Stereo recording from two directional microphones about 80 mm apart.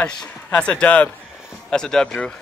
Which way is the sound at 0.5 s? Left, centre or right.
Centre.